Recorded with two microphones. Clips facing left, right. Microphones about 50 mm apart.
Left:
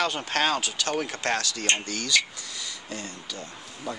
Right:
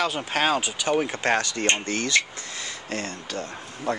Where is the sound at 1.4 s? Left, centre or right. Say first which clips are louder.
Right 3 dB; right.